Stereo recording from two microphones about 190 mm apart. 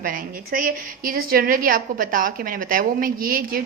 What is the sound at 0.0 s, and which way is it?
A woman's voice, 45° right (ahead or behind).